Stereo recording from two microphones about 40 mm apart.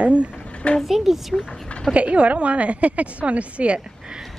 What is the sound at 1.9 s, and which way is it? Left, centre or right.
A woman's voice, right.